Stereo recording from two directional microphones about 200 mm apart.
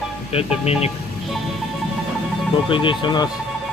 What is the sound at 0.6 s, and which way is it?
Speech, 30° left (ahead or behind).